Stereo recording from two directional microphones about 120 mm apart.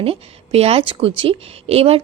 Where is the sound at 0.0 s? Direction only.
55° right (ahead or behind).